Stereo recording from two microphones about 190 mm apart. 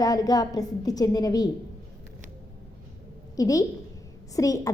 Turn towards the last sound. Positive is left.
turn(degrees=15)  # may be behind; listen again after turning